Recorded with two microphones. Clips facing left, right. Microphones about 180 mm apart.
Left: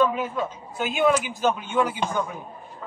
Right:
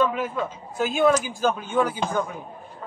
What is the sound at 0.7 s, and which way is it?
A man's voice, 40° right (ahead or behind).